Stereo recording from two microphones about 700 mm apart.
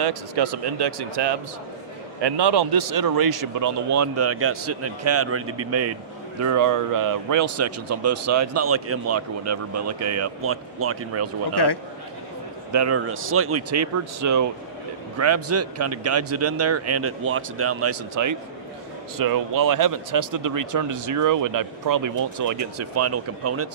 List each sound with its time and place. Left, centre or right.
0.0 s a man's voice: right
11.5 s a man's voice: left
12.7 s a man's voice: right